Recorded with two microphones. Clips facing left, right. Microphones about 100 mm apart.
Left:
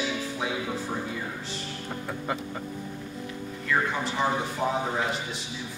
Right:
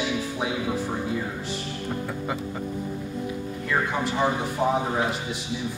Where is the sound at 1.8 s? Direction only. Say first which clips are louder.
Right 2 dB; 5° right (ahead or behind).